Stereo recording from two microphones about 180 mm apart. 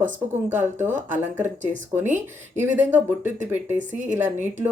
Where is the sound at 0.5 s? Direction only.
10° right (ahead or behind).